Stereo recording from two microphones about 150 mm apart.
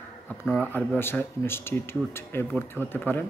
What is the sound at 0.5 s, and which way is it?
Speech, 15° left (ahead or behind).